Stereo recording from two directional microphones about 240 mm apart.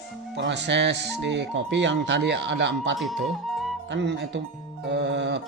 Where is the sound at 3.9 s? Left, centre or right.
Right.